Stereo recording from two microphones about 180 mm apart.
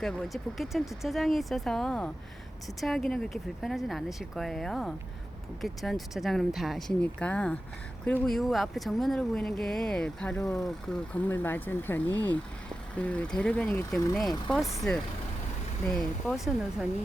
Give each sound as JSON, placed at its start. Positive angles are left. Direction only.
{"t": 0.0, "sound": "speech", "side_deg": 0}
{"t": 10.4, "sound": "speech", "side_deg": 20}
{"t": 14.2, "sound": "speech", "side_deg": 0}